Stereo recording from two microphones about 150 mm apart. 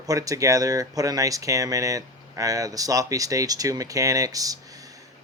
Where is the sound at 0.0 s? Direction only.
25° right (ahead or behind).